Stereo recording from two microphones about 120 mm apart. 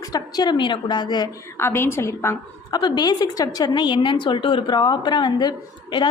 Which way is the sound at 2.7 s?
35° left (ahead or behind).